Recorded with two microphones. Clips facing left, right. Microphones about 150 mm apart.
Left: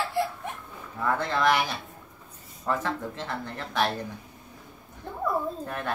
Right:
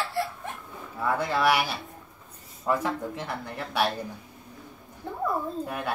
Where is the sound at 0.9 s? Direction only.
10° right (ahead or behind).